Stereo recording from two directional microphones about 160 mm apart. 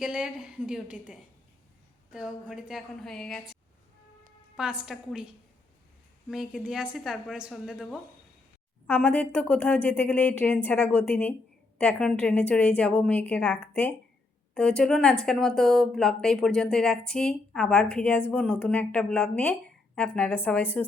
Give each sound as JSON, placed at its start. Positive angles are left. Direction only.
{"t": 0.0, "sound": "a woman's voice", "side_deg": -5}
{"t": 8.9, "sound": "a woman's voice", "side_deg": 10}